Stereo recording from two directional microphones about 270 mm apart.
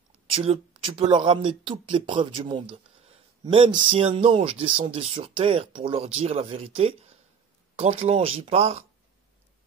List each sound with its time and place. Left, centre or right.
0.3 s speech: centre